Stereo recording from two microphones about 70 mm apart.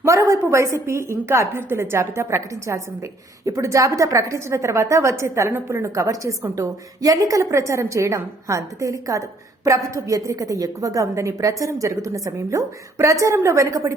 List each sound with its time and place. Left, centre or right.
0.0 s a woman's voice: right